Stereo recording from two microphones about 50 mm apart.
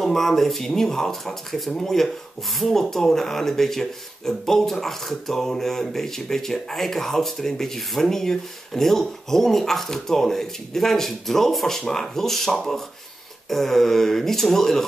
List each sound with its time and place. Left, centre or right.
0.0 s speech: centre